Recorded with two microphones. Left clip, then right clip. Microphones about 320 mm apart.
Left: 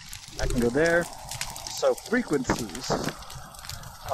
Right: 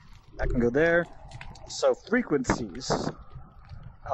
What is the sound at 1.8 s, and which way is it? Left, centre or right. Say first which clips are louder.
Speech: even; centre.